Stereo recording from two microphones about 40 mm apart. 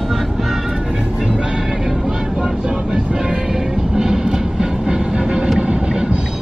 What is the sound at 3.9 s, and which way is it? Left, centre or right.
Train, centre.